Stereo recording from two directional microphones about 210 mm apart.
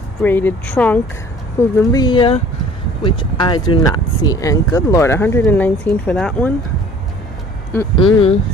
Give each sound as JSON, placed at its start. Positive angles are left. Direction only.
{"t": 0.2, "sound": "speech", "side_deg": 10}
{"t": 8.0, "sound": "speech", "side_deg": 30}